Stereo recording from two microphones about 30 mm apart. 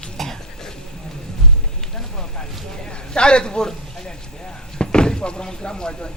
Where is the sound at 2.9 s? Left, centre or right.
Left.